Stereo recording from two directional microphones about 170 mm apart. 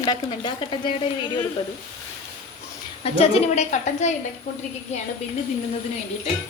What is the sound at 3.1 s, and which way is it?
Speech, 40° left (ahead or behind).